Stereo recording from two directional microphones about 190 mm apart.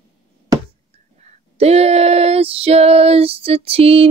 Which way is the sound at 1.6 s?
35° right (ahead or behind).